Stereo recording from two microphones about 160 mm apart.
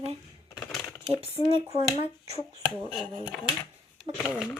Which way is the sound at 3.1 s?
25° left (ahead or behind).